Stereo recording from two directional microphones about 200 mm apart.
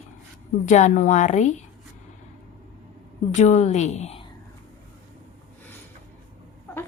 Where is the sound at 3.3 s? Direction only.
35° left (ahead or behind).